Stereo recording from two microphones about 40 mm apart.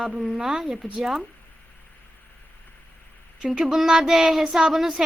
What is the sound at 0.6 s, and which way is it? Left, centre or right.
Speech, centre.